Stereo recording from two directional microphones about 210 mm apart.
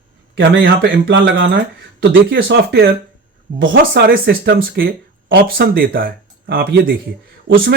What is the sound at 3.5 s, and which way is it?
Speech, 65° right (ahead or behind).